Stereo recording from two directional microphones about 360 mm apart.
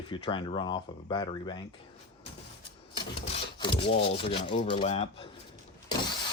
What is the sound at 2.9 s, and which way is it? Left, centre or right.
Speech, centre.